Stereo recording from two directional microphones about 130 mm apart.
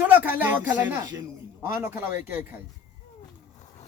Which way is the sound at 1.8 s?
20° right (ahead or behind).